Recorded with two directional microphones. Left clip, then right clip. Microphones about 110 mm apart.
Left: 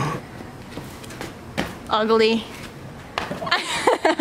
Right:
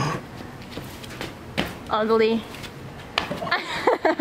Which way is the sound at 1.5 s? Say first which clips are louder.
Left 2 dB; 15° left (ahead or behind).